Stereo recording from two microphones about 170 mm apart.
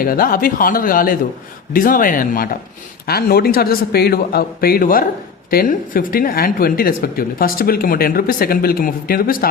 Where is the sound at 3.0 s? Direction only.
65° left (ahead or behind).